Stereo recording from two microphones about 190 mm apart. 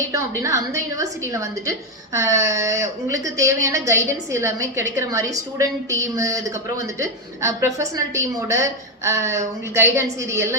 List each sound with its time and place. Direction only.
0.1 s a woman's voice: 15° right (ahead or behind)